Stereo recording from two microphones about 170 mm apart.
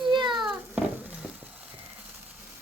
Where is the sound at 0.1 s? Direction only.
25° right (ahead or behind).